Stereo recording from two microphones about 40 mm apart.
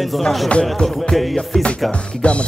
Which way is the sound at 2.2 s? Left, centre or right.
Left.